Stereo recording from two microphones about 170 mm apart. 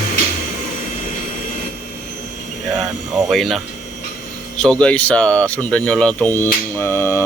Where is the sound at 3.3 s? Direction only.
Centre (ahead or behind).